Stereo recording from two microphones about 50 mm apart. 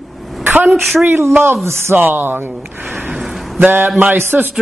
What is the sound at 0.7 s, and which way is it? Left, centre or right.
Speech, centre.